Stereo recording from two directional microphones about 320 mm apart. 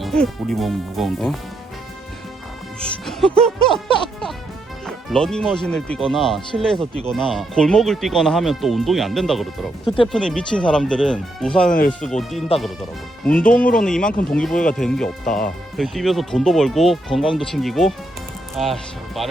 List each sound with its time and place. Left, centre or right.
0.0 s speech: centre
3.1 s speech: centre
9.8 s speech: centre
10.1 s speech: centre
13.7 s speech: centre